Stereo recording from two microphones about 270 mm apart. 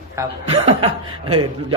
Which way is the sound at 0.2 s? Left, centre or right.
Centre.